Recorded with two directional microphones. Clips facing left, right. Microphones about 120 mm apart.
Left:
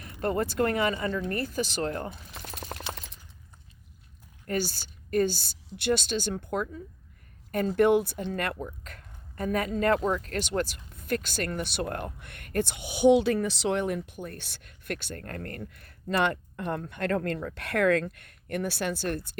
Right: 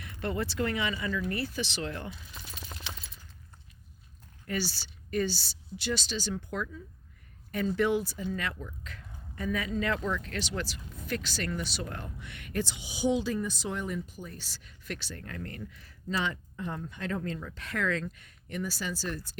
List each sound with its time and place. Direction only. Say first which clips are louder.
0.0 s speech: left 5 dB; 40° left (ahead or behind); by 2.6 s 65° left (ahead or behind)
4.4 s a woman's voice: left 4 dB; 50° left (ahead or behind)